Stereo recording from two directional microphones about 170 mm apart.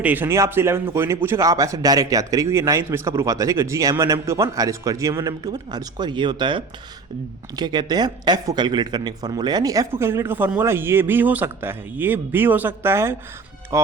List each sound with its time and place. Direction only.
0.0 s speech: 10° right (ahead or behind)